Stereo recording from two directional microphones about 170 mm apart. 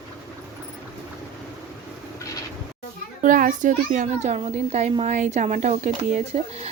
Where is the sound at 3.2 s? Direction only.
50° right (ahead or behind).